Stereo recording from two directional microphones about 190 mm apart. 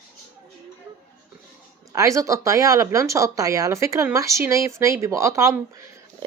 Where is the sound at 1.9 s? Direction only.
15° right (ahead or behind).